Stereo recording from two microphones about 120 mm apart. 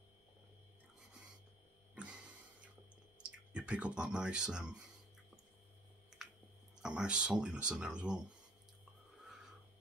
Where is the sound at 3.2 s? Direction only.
10° right (ahead or behind).